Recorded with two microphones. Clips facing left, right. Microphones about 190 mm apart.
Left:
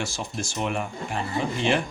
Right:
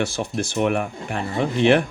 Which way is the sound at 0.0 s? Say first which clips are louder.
Right 7 dB; 60° right (ahead or behind).